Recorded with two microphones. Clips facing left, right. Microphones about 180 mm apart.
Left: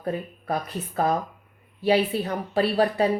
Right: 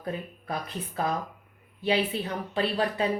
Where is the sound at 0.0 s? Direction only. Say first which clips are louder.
Left 5 dB; 40° left (ahead or behind).